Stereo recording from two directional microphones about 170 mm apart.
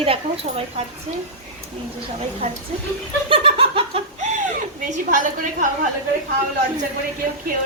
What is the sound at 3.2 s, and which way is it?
Laughter, 30° right (ahead or behind).